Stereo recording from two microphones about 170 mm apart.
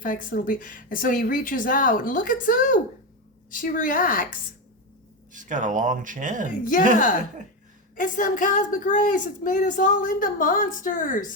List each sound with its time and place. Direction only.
0.0 s a woman's voice: 50° left (ahead or behind)
5.3 s speech: 50° right (ahead or behind)
7.9 s a woman's voice: 50° left (ahead or behind)